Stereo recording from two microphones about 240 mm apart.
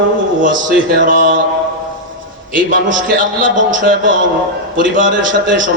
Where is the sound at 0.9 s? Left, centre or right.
Right.